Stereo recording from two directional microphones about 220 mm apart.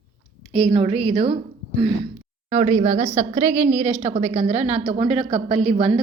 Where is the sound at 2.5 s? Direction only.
30° right (ahead or behind).